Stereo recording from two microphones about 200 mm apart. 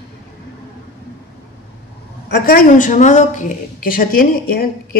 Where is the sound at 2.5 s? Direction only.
40° left (ahead or behind).